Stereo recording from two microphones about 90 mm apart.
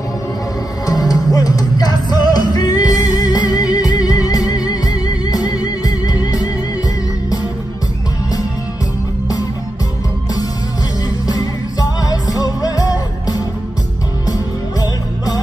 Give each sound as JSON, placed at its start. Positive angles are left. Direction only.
{"t": 0.8, "sound": "music", "side_deg": 45}
{"t": 11.2, "sound": "music", "side_deg": 45}
{"t": 14.8, "sound": "music", "side_deg": 45}